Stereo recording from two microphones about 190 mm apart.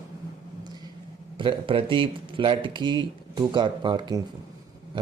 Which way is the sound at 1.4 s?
25° right (ahead or behind).